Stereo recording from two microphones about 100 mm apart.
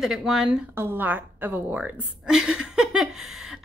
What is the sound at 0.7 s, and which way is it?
A woman's voice, 20° right (ahead or behind).